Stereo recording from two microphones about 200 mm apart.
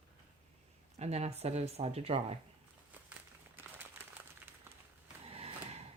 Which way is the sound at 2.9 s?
10° right (ahead or behind).